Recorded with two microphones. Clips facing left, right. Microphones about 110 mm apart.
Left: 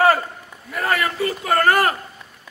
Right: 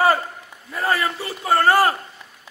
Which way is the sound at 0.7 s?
25° right (ahead or behind).